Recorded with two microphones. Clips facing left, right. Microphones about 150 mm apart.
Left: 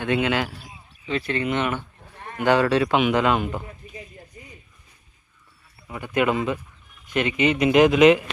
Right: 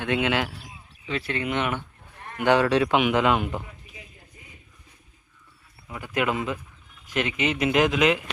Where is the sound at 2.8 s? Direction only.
15° right (ahead or behind).